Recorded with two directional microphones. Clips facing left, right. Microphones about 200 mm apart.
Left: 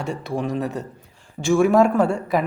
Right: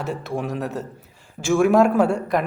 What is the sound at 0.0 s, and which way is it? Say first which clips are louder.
Speech: left 1 dB; centre (ahead or behind).